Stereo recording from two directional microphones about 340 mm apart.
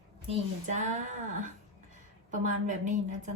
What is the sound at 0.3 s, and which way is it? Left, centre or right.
A woman's voice, centre.